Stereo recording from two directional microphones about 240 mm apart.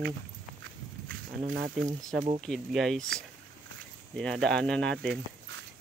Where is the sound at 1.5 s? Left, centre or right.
Right.